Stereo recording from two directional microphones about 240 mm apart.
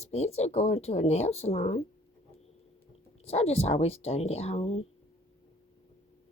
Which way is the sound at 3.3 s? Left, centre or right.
Left.